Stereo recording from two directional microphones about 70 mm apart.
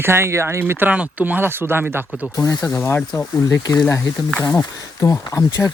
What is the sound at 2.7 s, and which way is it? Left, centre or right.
Speech, left.